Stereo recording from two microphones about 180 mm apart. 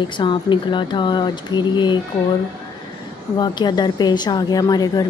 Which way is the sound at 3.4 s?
25° left (ahead or behind).